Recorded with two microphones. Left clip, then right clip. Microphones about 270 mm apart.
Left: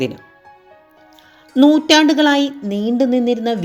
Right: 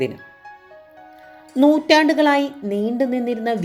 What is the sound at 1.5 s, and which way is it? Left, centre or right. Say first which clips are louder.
A woman's voice: left 3 dB; centre.